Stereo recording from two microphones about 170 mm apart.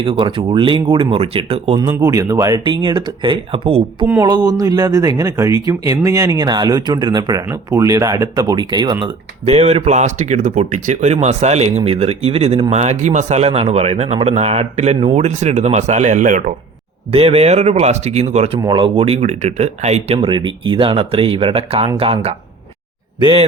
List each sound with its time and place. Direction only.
0.0 s speech: 30° right (ahead or behind)
1.9 s speech: 15° right (ahead or behind); by 3.8 s 35° right (ahead or behind)
4.0 s speech: 20° right (ahead or behind); by 16.4 s 50° right (ahead or behind)
17.1 s speech: 35° right (ahead or behind)
18.6 s speech: 30° right (ahead or behind)
20.1 s speech: 30° right (ahead or behind)